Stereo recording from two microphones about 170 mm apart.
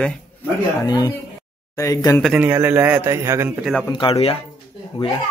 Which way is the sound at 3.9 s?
30° left (ahead or behind).